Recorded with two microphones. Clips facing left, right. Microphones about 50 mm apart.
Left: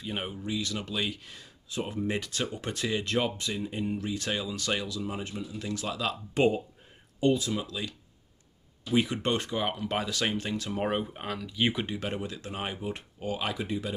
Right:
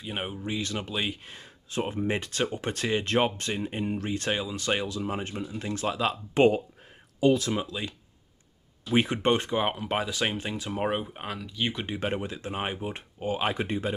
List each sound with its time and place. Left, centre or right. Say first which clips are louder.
0.0 s speech: right 1 dB; centre
0.4 s speech: right 1 dB; right
4.3 s speech: right 3 dB; right
7.5 s speech: right 2 dB; right
8.9 s speech: right 2 dB; right
9.2 s speech: right 4 dB; right; by 11.5 s centre
11.5 s speech: left 3 dB; centre
11.8 s speech: right 3 dB; right